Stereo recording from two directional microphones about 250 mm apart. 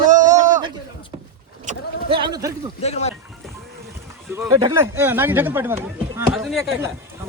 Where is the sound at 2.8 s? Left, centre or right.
Left.